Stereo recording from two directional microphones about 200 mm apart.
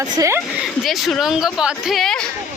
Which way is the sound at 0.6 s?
Centre (ahead or behind).